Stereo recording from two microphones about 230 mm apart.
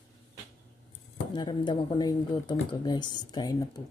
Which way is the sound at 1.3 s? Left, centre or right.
Centre.